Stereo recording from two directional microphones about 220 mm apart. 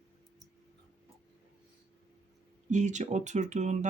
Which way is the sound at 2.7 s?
35° right (ahead or behind).